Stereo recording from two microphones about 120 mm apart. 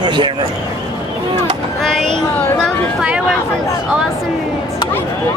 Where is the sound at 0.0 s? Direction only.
40° right (ahead or behind).